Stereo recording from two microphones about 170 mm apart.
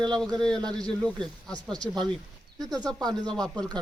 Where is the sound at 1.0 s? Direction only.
5° left (ahead or behind).